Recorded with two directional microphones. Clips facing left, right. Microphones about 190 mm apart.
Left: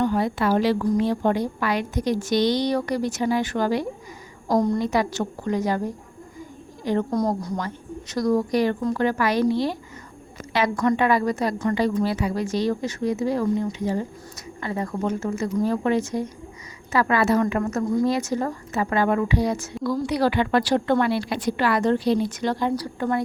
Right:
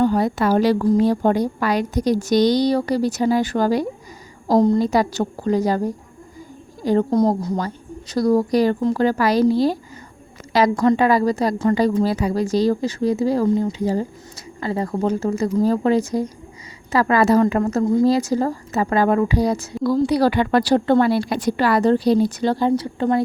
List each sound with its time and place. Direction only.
0.0 s a woman's voice: 40° right (ahead or behind)
4.4 s a woman's voice: 25° right (ahead or behind)
7.1 s a woman's voice: 25° right (ahead or behind)